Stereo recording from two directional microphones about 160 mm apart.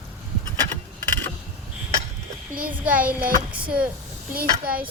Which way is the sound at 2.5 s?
60° right (ahead or behind).